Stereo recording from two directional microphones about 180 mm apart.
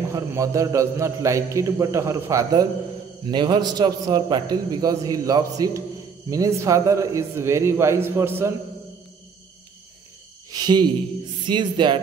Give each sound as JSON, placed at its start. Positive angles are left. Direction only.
{"t": 0.1, "sound": "a man's voice", "side_deg": -15}
{"t": 10.5, "sound": "a man's voice", "side_deg": -25}